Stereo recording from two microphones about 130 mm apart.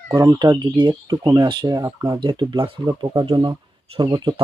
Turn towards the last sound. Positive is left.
turn(degrees=-35)  # may be behind; listen again after turning